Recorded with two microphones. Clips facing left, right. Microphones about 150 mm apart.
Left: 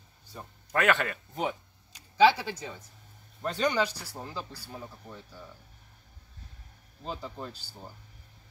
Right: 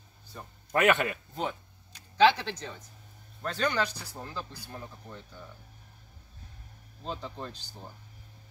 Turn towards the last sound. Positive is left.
turn(degrees=5)  # may be behind; listen again after turning